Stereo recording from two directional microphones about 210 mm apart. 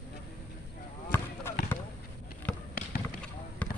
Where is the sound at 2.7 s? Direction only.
45° left (ahead or behind).